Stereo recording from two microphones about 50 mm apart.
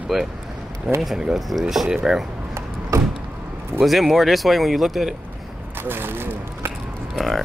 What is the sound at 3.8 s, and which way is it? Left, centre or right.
Speech, centre.